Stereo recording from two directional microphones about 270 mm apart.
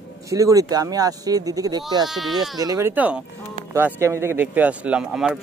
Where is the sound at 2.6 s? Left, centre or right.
Centre.